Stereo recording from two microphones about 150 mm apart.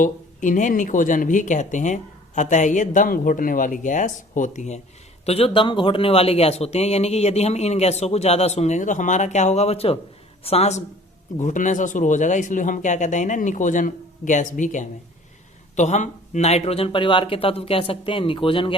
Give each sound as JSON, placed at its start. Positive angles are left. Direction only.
{"t": 0.0, "sound": "speech", "side_deg": 60}
{"t": 5.2, "sound": "speech", "side_deg": 40}